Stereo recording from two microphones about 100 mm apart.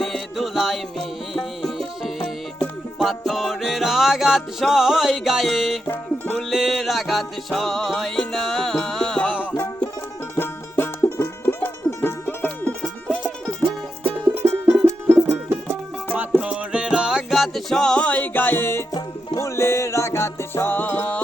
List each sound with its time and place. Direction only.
0.0 s music: centre (ahead or behind)
10.3 s music: 20° left (ahead or behind)
13.1 s music: 15° right (ahead or behind); by 21.2 s 15° left (ahead or behind)